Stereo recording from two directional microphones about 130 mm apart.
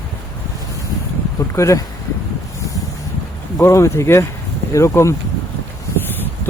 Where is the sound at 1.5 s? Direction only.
25° left (ahead or behind).